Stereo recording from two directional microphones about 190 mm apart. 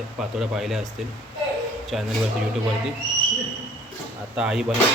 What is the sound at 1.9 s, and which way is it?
Speech, centre (ahead or behind).